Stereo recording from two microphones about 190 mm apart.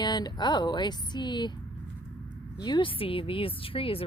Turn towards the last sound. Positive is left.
turn(degrees=30)  # may be behind; listen again after turning